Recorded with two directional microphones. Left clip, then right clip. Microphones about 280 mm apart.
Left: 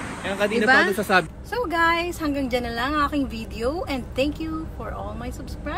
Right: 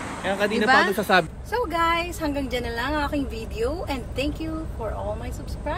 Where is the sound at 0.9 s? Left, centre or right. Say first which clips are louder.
Even; right.